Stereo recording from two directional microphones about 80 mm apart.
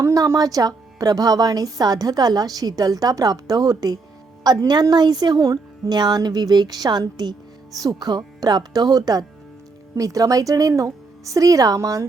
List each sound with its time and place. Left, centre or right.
0.0 s a woman's voice: right